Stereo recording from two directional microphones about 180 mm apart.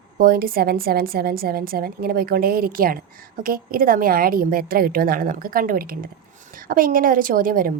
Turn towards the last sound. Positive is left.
turn(degrees=-50)  # may be behind; listen again after turning